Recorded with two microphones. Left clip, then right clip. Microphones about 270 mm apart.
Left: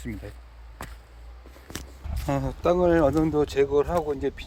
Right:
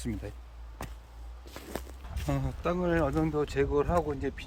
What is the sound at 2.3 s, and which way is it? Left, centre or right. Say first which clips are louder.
Speech: left 8 dB; centre.